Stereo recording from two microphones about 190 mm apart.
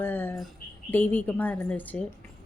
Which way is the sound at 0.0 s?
10° left (ahead or behind).